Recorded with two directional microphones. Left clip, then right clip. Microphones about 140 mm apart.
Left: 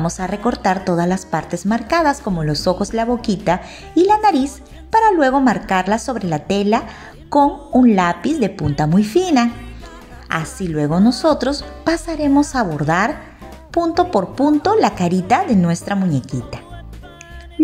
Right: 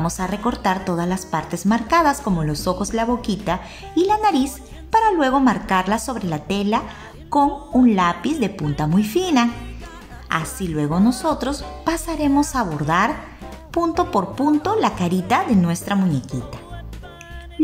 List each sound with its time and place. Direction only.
0.0 s a woman's voice: 20° left (ahead or behind)